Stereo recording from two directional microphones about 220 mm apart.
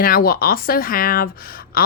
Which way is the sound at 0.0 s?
40° left (ahead or behind).